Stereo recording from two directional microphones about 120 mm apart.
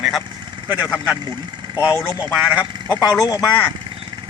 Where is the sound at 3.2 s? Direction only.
35° left (ahead or behind).